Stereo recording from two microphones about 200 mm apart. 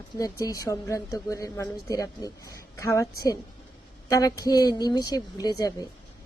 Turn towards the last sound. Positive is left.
turn(degrees=20)  # may be behind; listen again after turning